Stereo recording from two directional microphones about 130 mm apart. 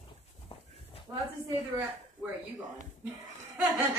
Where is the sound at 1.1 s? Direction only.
25° right (ahead or behind).